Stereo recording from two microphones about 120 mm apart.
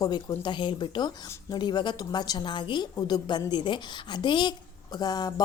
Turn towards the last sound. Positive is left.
turn(degrees=35)  # may be behind; listen again after turning